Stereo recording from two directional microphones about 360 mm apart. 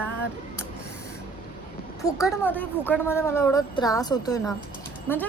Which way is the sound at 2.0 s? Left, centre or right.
Centre.